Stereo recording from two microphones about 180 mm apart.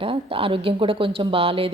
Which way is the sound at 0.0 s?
30° right (ahead or behind).